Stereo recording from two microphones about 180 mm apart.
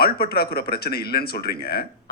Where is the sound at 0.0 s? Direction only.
60° left (ahead or behind).